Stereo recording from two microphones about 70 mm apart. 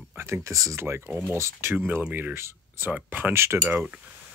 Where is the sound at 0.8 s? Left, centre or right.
Right.